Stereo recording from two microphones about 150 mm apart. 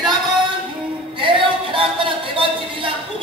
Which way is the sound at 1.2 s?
35° right (ahead or behind).